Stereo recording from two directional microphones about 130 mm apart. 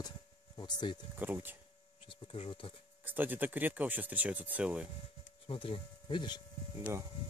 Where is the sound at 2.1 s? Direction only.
40° left (ahead or behind).